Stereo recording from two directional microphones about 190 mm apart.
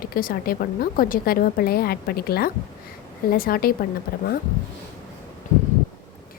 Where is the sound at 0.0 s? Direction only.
50° left (ahead or behind).